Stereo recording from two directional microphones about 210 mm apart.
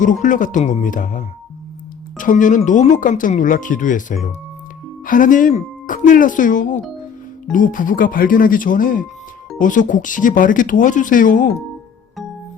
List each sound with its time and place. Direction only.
0.0 s speech: 40° left (ahead or behind)